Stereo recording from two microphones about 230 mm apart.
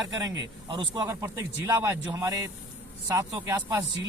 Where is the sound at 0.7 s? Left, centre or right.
Right.